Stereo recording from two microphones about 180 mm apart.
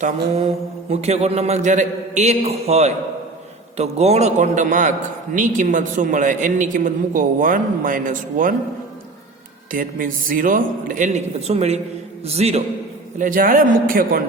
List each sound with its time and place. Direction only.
0.9 s a man's voice: 35° right (ahead or behind)
9.7 s a man's voice: 50° right (ahead or behind)
13.1 s a man's voice: 50° right (ahead or behind)